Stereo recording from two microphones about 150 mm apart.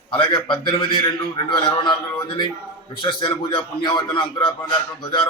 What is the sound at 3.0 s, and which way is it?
A man's voice, 30° left (ahead or behind).